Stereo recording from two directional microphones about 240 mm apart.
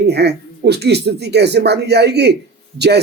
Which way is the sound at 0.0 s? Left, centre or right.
Right.